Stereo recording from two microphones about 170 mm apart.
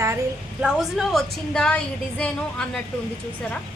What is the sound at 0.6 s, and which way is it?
A woman's voice, centre (ahead or behind).